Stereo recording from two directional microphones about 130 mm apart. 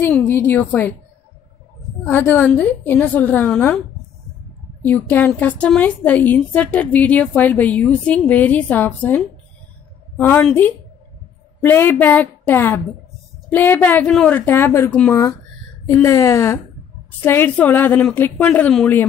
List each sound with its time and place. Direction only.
0.0 s a woman's voice: 10° left (ahead or behind)
2.0 s a woman's voice: 15° left (ahead or behind)
4.8 s a woman's voice: 15° left (ahead or behind)